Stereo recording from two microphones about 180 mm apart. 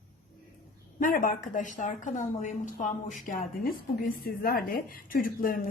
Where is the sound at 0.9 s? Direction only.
50° left (ahead or behind).